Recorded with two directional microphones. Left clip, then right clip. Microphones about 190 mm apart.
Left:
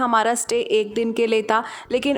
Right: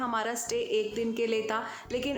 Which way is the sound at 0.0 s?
55° left (ahead or behind).